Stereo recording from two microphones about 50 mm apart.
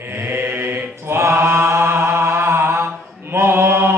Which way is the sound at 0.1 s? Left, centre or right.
Right.